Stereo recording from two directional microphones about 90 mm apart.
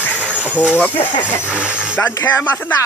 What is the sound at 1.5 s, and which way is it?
Speech, 15° right (ahead or behind).